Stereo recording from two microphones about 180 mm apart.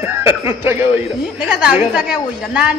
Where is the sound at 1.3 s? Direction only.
5° right (ahead or behind).